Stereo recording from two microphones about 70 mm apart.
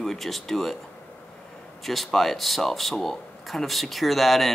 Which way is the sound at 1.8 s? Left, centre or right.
Centre.